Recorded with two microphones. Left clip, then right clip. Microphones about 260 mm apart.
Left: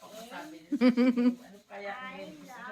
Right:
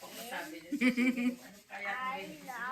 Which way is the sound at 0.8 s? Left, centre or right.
Centre.